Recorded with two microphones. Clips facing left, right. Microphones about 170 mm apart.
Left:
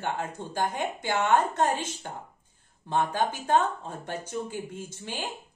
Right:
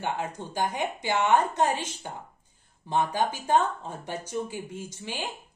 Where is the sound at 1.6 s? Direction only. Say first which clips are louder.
Even; 50° left (ahead or behind).